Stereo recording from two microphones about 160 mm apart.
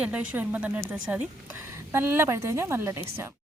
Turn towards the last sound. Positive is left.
turn(degrees=-15)  # may be behind; listen again after turning